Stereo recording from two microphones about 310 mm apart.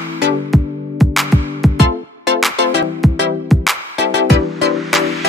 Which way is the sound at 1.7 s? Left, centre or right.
Right.